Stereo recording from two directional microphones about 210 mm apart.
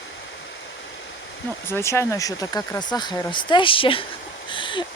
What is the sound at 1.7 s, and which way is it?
Speech, 10° left (ahead or behind).